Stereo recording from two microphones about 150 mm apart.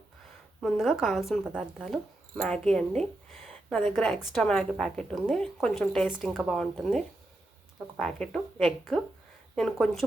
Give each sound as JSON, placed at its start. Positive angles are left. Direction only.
{"t": 0.6, "sound": "a woman's voice", "side_deg": 0}